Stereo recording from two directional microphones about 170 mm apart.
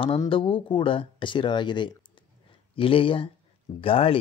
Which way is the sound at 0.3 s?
30° left (ahead or behind).